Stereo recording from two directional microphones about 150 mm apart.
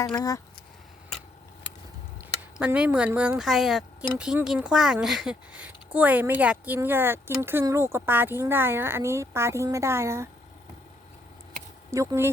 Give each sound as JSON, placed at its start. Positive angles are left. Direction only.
{"t": 0.2, "sound": "speech", "side_deg": 20}
{"t": 2.6, "sound": "speech", "side_deg": -10}
{"t": 11.9, "sound": "speech", "side_deg": -20}